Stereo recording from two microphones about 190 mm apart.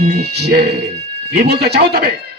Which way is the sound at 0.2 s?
60° right (ahead or behind).